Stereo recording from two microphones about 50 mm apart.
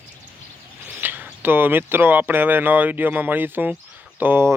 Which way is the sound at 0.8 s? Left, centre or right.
Right.